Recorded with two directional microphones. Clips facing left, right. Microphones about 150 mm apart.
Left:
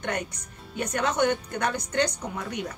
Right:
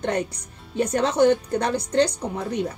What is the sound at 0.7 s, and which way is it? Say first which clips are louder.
A woman's voice: right 6 dB; 30° right (ahead or behind).